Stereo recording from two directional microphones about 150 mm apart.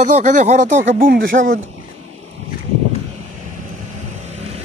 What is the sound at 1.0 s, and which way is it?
Speech, 70° right (ahead or behind).